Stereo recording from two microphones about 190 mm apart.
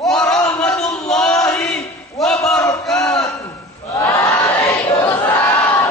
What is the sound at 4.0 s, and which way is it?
Crowd, 15° left (ahead or behind).